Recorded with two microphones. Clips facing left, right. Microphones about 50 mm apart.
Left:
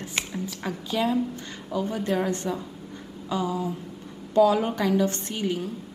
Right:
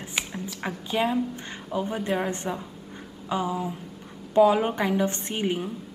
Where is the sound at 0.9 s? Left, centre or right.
Right.